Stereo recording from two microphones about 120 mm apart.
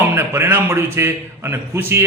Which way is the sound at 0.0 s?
15° right (ahead or behind).